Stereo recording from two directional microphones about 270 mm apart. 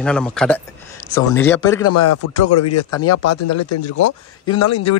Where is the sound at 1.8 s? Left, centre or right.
Left.